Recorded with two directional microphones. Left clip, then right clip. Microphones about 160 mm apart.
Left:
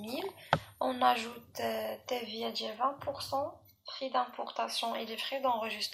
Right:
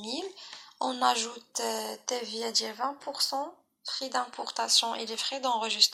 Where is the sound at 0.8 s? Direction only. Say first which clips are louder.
Right 4 dB; 25° right (ahead or behind).